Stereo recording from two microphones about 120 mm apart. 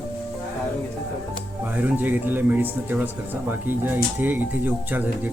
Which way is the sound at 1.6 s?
15° right (ahead or behind).